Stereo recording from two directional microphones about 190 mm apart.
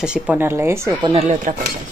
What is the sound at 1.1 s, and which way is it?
Speech, 35° right (ahead or behind).